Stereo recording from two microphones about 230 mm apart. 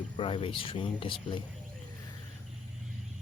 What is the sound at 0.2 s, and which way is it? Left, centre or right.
Speech, left.